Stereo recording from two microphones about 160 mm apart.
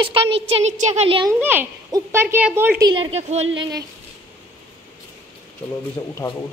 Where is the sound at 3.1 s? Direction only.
40° right (ahead or behind).